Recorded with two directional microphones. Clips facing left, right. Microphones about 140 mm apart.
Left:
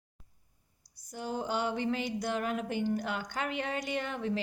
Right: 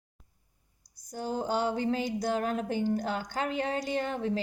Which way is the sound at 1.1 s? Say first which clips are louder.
Right 3 dB; 40° right (ahead or behind).